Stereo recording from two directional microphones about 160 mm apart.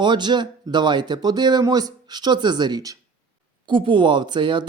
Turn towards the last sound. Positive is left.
turn(degrees=-30)  # may be behind; listen again after turning